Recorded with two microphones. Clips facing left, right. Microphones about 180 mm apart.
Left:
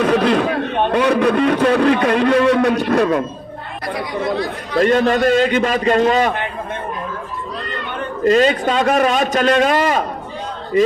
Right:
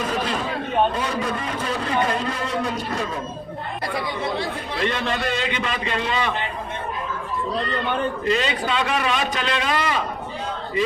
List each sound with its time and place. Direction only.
0.0 s a man's voice: 70° left (ahead or behind)
4.8 s a man's voice: 45° left (ahead or behind)
8.2 s a man's voice: 45° left (ahead or behind)